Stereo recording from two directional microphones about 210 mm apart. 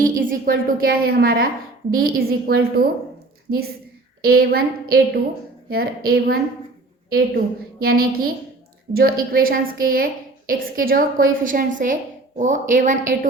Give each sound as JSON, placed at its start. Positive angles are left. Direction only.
{"t": 0.0, "sound": "a woman's voice", "side_deg": -40}
{"t": 4.2, "sound": "a woman's voice", "side_deg": -45}
{"t": 7.8, "sound": "a woman's voice", "side_deg": -45}